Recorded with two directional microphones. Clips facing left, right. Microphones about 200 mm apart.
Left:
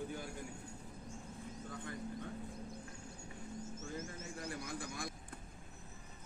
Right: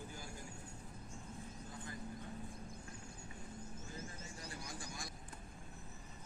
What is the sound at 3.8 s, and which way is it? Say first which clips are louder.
Bird: left 5 dB; 45° left (ahead or behind).